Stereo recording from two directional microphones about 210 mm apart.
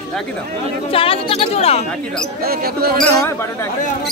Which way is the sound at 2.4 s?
45° right (ahead or behind).